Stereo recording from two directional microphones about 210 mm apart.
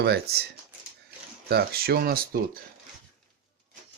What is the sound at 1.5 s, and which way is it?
Speech, 45° right (ahead or behind).